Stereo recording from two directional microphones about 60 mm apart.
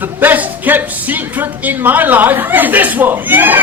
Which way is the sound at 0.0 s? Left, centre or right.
Right.